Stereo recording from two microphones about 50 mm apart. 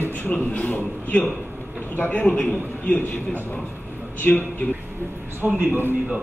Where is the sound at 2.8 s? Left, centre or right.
Left.